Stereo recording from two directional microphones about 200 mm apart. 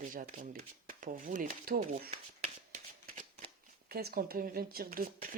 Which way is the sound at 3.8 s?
50° right (ahead or behind).